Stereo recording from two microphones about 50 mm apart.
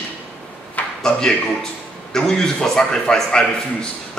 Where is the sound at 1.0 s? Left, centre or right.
Centre.